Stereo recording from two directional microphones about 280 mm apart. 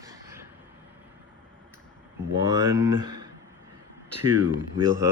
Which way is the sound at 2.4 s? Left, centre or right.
Centre.